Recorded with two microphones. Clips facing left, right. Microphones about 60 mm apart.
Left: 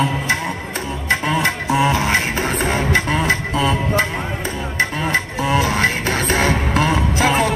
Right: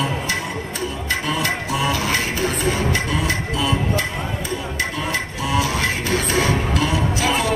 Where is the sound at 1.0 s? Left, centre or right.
Left.